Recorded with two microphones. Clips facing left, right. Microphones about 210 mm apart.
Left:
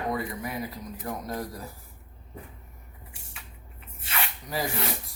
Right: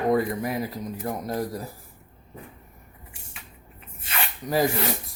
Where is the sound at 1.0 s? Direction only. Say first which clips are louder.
Right 4 dB; 30° right (ahead or behind).